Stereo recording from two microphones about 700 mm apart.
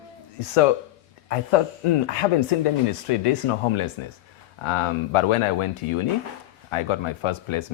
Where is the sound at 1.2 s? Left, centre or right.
Left.